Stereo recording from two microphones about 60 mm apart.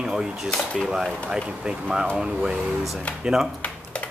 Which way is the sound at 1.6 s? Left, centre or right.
Centre.